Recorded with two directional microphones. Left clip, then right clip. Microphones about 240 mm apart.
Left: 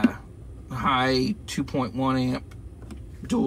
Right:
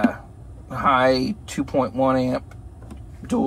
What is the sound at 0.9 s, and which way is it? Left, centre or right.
Speech, centre.